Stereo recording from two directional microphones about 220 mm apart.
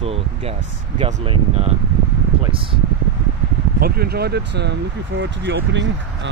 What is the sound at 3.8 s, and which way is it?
Speech, 45° right (ahead or behind).